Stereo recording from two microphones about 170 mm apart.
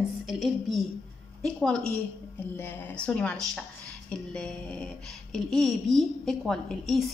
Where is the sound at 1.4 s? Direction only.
5° left (ahead or behind).